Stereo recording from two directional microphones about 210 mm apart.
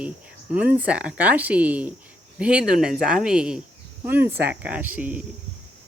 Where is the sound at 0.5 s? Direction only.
10° right (ahead or behind).